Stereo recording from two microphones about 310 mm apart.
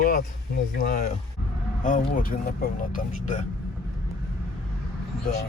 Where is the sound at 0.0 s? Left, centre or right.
Left.